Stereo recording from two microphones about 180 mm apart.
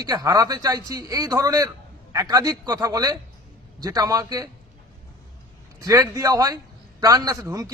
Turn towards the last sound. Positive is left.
turn(degrees=-20)  # may be behind; listen again after turning